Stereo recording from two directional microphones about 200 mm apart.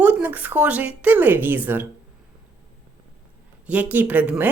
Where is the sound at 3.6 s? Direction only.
5° right (ahead or behind).